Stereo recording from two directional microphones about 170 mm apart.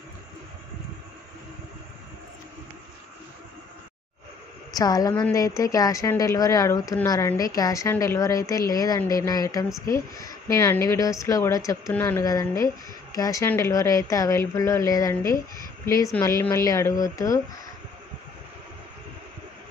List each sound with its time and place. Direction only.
4.7 s a woman's voice: 20° left (ahead or behind)